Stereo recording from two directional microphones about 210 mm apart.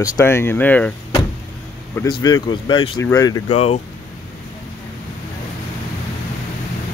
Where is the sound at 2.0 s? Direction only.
20° left (ahead or behind).